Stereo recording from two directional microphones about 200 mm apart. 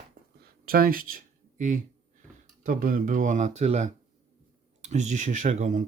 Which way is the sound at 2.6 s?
45° right (ahead or behind).